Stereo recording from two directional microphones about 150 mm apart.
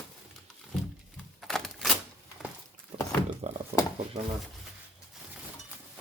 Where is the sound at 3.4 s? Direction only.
45° right (ahead or behind).